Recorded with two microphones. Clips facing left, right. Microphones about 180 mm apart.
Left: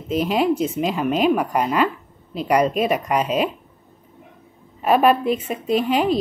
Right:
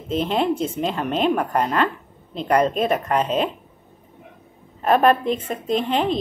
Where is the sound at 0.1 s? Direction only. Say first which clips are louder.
Left 2 dB; 5° left (ahead or behind).